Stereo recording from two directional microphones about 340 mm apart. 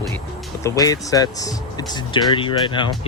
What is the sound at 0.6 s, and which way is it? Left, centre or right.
Speech, centre.